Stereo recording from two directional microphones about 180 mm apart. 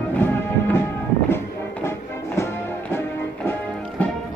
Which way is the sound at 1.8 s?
15° left (ahead or behind).